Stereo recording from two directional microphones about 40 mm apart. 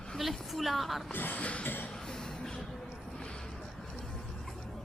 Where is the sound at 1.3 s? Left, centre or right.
Left.